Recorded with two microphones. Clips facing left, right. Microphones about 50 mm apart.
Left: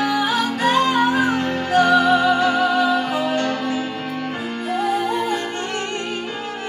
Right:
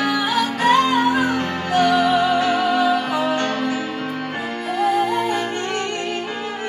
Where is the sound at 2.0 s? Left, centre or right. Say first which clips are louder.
Left 1 dB; centre.